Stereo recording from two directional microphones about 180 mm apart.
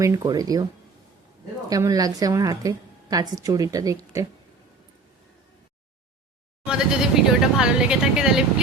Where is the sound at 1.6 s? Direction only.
20° right (ahead or behind).